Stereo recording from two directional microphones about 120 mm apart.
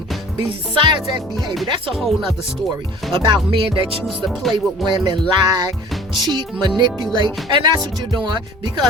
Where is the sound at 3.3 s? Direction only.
45° right (ahead or behind).